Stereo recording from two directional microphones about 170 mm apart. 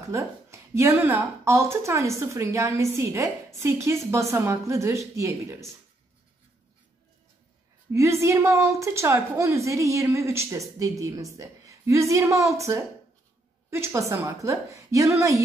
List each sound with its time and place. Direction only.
0.0 s speech: 15° right (ahead or behind)
7.9 s speech: 15° right (ahead or behind)